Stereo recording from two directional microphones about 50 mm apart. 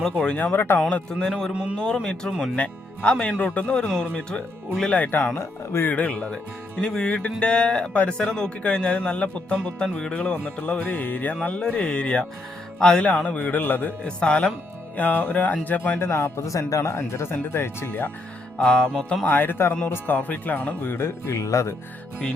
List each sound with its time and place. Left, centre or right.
0.0 s music: centre
0.5 s speech: left
0.9 s speech: left
1.5 s speech: right
2.6 s speech: left
13.2 s speech: left
14.0 s speech: left
14.9 s speech: left
16.0 s speech: left
17.1 s speech: left
18.6 s music: centre
19.2 s speech: left
20.1 s speech: left
21.0 s speech: left